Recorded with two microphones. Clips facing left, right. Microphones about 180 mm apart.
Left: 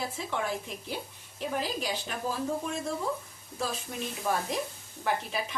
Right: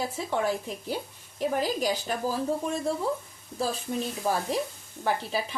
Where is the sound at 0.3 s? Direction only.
40° right (ahead or behind).